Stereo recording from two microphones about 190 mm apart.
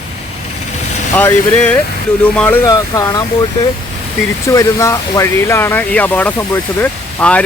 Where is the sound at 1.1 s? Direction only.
10° left (ahead or behind).